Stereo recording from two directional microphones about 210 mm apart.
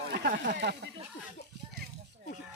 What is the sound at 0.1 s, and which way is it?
Speech, 45° right (ahead or behind).